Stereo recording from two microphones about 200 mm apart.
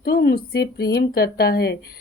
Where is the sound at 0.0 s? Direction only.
50° left (ahead or behind).